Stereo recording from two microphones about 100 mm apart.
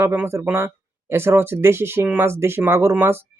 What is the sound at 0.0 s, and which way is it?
Speech, 25° right (ahead or behind).